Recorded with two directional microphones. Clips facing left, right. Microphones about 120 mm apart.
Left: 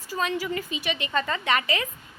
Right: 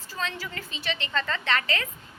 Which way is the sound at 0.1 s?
15° left (ahead or behind).